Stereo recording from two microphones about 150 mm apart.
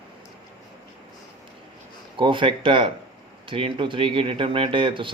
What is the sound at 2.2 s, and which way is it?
Speech, 35° right (ahead or behind).